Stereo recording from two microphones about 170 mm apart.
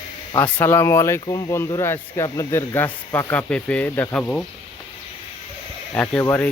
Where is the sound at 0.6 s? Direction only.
15° left (ahead or behind).